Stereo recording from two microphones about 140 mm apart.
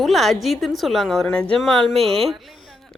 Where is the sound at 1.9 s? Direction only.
45° right (ahead or behind).